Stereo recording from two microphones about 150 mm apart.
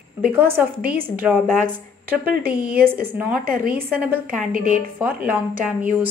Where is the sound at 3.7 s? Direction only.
10° right (ahead or behind).